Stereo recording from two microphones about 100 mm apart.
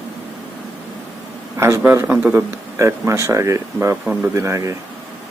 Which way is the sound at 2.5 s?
30° right (ahead or behind).